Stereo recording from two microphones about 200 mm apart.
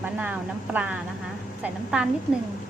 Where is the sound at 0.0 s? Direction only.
10° right (ahead or behind).